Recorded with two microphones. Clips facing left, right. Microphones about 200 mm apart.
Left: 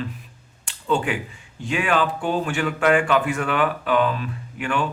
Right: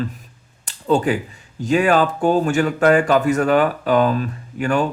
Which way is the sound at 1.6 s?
40° right (ahead or behind).